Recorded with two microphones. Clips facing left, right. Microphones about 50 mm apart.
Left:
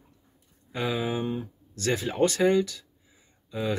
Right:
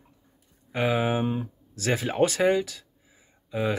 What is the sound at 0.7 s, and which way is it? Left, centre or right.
Speech, right.